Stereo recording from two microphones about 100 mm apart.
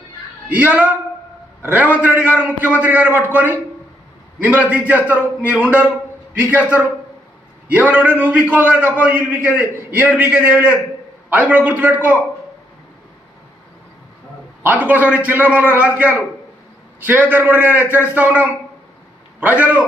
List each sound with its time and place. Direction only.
0.4 s a man's voice: 15° right (ahead or behind)
14.6 s a man's voice: 15° right (ahead or behind)